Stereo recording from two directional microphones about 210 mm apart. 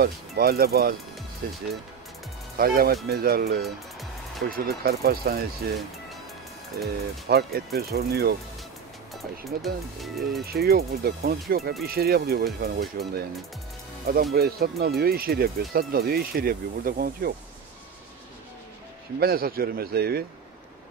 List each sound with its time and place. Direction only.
0.0 s speech: 45° right (ahead or behind)
6.8 s speech: 50° right (ahead or behind)
9.6 s speech: centre (ahead or behind)
10.4 s speech: 45° right (ahead or behind)
14.3 s speech: 45° right (ahead or behind)
19.1 s speech: 45° right (ahead or behind)